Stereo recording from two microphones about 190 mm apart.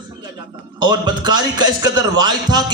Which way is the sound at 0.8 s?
20° right (ahead or behind).